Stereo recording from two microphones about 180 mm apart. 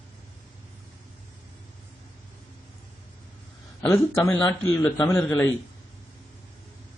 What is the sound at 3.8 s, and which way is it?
Speech, 10° left (ahead or behind).